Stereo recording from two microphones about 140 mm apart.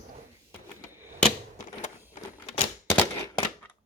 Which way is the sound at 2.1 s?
50° left (ahead or behind).